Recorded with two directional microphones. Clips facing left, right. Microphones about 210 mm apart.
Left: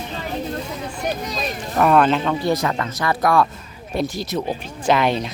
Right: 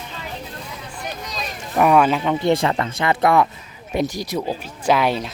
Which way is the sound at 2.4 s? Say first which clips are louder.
Right 2 dB; 25° right (ahead or behind).